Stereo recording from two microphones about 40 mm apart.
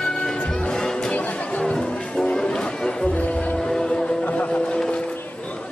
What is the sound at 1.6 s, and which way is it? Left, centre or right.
Music, left.